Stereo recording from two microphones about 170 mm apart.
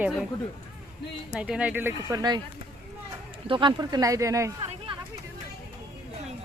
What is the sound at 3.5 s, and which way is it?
Speech, 30° right (ahead or behind).